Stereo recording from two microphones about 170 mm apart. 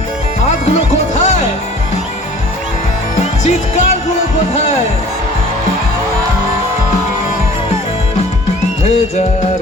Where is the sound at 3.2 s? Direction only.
40° left (ahead or behind).